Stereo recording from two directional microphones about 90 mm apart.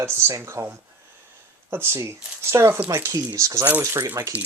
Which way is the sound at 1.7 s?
30° right (ahead or behind).